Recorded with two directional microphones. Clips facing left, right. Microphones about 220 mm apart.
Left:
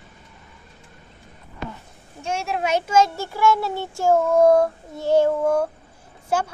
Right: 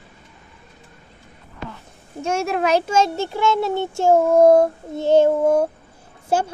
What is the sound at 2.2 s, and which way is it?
Speech, 45° right (ahead or behind).